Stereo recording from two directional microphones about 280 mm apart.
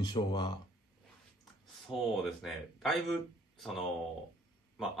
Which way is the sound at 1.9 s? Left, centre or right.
Centre.